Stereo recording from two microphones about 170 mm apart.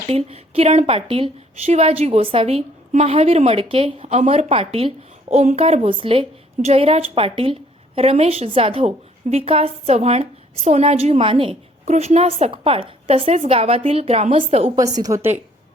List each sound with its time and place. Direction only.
0.1 s a woman's voice: 35° right (ahead or behind)
15.0 s a woman's voice: 15° right (ahead or behind)